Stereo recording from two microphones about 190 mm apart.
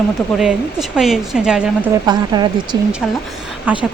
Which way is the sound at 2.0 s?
20° right (ahead or behind).